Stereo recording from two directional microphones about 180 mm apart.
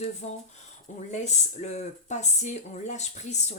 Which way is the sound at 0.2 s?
35° left (ahead or behind).